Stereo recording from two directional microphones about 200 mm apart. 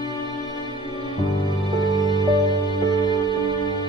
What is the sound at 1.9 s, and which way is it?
Music, 20° right (ahead or behind).